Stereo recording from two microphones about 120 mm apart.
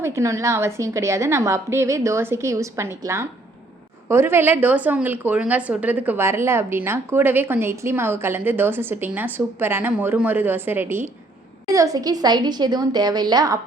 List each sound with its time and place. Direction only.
0.0 s a woman's voice: 25° right (ahead or behind)
11.7 s a woman's voice: 30° right (ahead or behind)